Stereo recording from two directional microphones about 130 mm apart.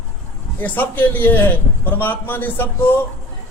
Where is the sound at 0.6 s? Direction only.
15° left (ahead or behind).